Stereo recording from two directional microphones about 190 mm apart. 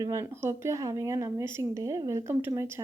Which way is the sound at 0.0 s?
15° right (ahead or behind).